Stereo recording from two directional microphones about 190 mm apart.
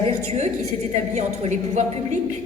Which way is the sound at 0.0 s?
35° right (ahead or behind).